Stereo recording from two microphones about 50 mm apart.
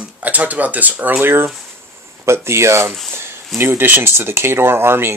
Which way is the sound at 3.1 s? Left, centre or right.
Right.